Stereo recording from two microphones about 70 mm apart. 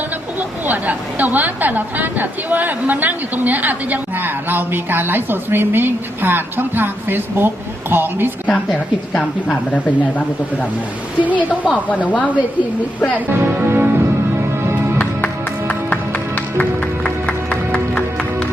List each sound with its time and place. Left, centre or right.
0.3 s a woman's voice: right
11.2 s a woman's voice: right
11.9 s speech: left
13.1 s speech: right
14.9 s music: left